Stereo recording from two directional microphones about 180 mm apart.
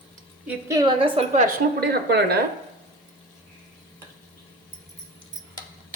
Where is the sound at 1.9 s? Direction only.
65° right (ahead or behind).